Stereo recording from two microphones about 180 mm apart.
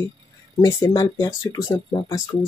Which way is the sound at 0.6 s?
20° left (ahead or behind).